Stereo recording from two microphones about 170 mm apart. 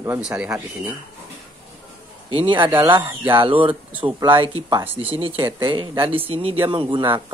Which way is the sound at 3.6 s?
10° right (ahead or behind).